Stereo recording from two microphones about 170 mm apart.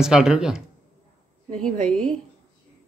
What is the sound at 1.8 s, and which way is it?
Speech, 5° left (ahead or behind).